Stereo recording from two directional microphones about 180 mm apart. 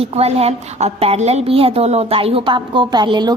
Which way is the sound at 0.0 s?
35° right (ahead or behind).